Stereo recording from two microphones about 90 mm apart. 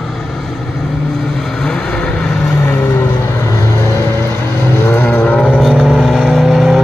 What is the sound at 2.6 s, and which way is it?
Vehicle, 25° left (ahead or behind).